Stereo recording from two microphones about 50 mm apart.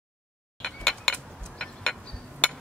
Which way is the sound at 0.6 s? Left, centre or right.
Centre.